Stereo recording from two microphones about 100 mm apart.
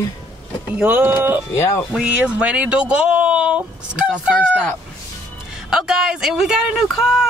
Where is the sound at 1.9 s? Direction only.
10° right (ahead or behind).